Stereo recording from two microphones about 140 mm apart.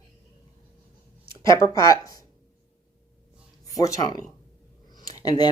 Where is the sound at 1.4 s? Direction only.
25° left (ahead or behind).